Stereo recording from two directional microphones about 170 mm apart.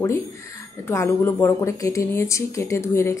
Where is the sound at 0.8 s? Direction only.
15° left (ahead or behind).